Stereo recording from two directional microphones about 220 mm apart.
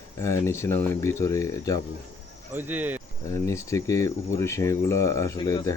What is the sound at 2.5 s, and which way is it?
Speech, 10° right (ahead or behind).